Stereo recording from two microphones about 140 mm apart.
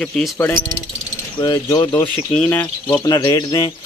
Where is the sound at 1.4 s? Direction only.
30° left (ahead or behind).